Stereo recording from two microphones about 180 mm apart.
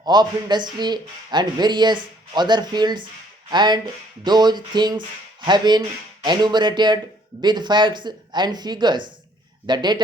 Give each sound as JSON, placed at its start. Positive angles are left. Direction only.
{"t": 0.0, "sound": "speech", "side_deg": -25}